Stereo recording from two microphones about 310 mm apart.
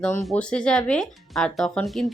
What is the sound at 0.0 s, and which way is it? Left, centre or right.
Speech, centre.